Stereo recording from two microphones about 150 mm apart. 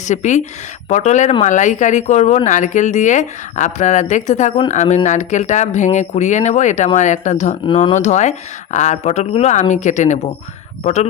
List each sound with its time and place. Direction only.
0.0 s speech: 50° left (ahead or behind)